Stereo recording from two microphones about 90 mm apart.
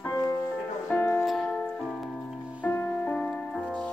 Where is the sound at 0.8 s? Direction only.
20° left (ahead or behind).